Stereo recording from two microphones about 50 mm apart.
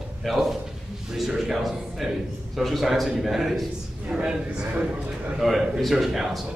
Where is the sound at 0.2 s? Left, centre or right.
Centre.